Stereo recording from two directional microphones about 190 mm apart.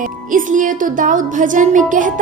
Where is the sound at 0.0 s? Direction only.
45° right (ahead or behind).